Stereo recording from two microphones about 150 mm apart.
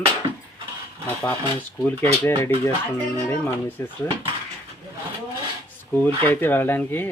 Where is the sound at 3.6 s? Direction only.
15° left (ahead or behind).